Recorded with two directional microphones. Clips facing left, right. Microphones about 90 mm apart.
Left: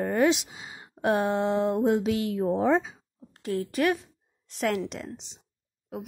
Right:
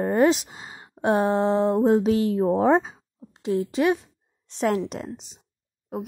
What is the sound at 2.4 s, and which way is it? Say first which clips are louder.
Speech: right 3 dB; 50° right (ahead or behind).